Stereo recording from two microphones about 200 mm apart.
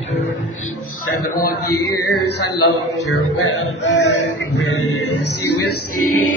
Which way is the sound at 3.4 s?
70° left (ahead or behind).